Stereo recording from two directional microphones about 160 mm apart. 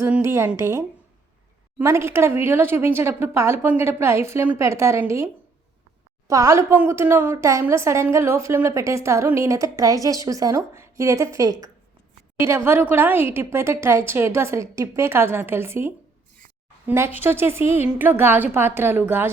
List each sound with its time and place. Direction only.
0.0 s a woman's voice: 15° right (ahead or behind)